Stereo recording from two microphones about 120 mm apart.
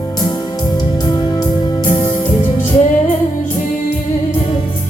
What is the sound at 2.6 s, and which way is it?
Music, 90° left.